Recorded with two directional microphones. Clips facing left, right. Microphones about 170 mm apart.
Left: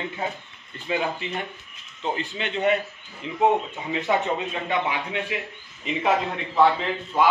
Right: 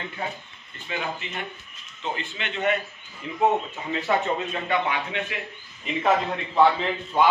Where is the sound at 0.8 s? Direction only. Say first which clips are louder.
Left 5 dB; 30° left (ahead or behind).